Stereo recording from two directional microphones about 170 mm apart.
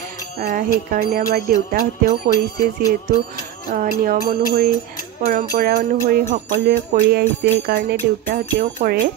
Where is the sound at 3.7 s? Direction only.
55° right (ahead or behind).